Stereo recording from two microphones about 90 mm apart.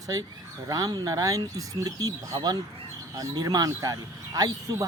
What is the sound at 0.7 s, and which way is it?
Speech, 45° right (ahead or behind).